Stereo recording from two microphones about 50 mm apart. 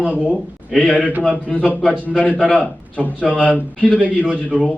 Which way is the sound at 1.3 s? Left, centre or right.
Left.